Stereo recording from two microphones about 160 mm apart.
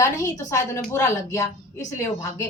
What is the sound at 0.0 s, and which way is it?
A woman's voice, 20° left (ahead or behind).